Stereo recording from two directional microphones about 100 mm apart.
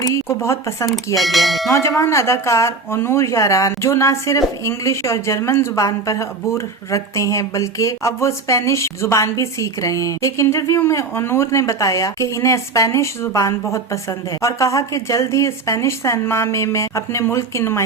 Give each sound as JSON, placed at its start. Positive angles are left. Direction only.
{"t": 0.0, "sound": "speech", "side_deg": 30}
{"t": 0.9, "sound": "speech", "side_deg": 0}
{"t": 1.6, "sound": "speech", "side_deg": 30}